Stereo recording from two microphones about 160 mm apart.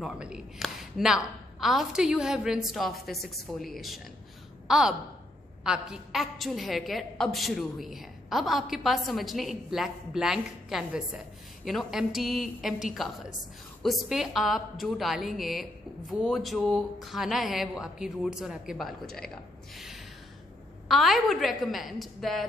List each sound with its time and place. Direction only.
0.0 s a woman's voice: 5° right (ahead or behind)
19.7 s a sound: centre (ahead or behind)
20.9 s a woman's voice: centre (ahead or behind)